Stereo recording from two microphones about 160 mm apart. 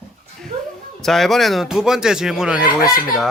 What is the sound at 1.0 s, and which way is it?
A man's voice, centre (ahead or behind).